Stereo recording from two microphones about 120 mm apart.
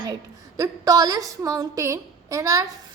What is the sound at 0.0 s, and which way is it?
A woman's voice, 30° right (ahead or behind).